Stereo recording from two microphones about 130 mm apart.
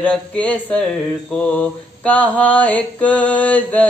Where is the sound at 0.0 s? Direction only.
10° left (ahead or behind).